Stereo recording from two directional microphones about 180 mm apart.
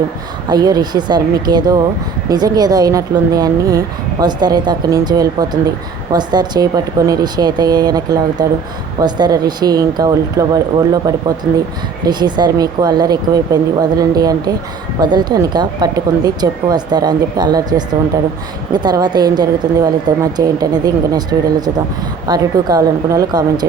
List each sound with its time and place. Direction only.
0.4 s speech: 20° right (ahead or behind)
11.5 s speech: 10° right (ahead or behind)
12.0 s speech: 25° right (ahead or behind)